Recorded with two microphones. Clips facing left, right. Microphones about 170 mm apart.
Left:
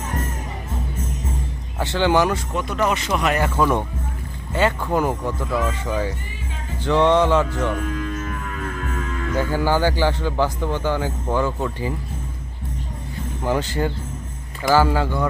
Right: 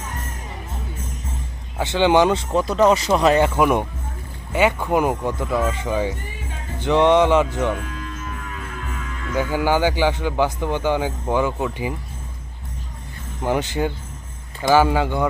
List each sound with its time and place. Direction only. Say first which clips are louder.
1.8 s speech: right 2 dB; 20° right (ahead or behind)
2.5 s a man's voice: right 6 dB; 35° right (ahead or behind); by 7.7 s 15° right (ahead or behind)
9.4 s a man's voice: right 1 dB; 15° right (ahead or behind)
13.4 s a man's voice: right 1 dB; 15° right (ahead or behind)